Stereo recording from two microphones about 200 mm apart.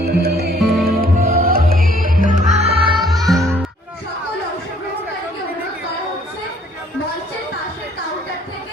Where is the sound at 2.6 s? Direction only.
30° right (ahead or behind).